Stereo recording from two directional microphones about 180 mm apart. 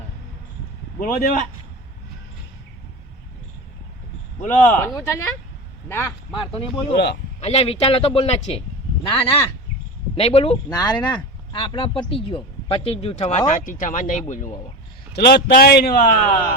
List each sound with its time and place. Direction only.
0.9 s speech: 50° left (ahead or behind)
4.6 s speech: 15° left (ahead or behind)
6.3 s speech: 30° left (ahead or behind)
6.9 s speech: 65° left (ahead or behind)
7.4 s speech: 35° left (ahead or behind)
10.7 s speech: 20° left (ahead or behind); by 14.4 s 45° left (ahead or behind)
15.1 s a man's voice: 65° left (ahead or behind)